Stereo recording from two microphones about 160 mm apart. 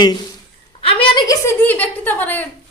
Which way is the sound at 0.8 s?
30° left (ahead or behind).